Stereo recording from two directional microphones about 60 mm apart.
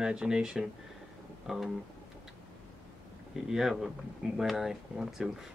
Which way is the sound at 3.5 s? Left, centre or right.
Centre.